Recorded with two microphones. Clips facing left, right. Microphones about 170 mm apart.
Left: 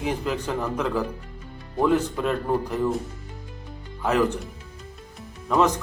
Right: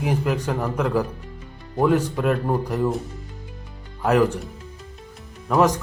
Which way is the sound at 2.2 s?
10° right (ahead or behind).